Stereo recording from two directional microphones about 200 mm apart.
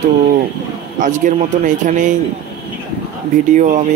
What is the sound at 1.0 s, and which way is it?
Speech, 40° right (ahead or behind).